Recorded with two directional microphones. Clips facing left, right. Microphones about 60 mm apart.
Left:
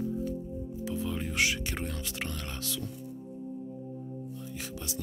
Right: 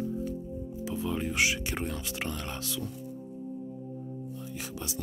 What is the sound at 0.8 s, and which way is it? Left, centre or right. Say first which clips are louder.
Music: right 2 dB; centre.